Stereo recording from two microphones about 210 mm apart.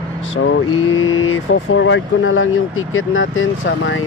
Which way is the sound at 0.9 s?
70° left (ahead or behind).